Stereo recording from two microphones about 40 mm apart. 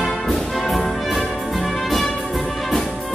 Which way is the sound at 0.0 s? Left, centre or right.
Centre.